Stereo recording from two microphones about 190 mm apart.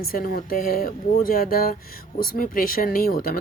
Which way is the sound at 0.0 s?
50° left (ahead or behind).